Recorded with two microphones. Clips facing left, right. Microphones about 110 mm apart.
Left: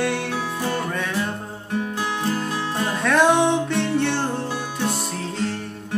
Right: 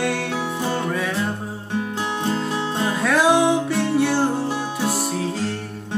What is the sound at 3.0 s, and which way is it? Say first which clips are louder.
Music: even; 5° right (ahead or behind).